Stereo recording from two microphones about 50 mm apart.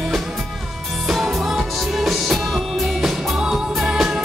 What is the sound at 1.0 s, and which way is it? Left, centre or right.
Music, centre.